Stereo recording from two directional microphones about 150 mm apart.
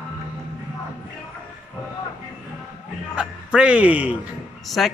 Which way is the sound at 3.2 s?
5° right (ahead or behind).